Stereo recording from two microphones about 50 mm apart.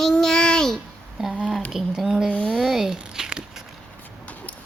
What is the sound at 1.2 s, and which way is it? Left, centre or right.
A child's voice, centre.